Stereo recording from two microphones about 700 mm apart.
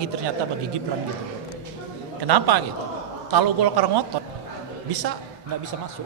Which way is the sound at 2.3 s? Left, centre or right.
Right.